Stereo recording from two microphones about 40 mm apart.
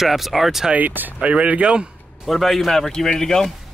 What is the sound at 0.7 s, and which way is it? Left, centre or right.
Speech, right.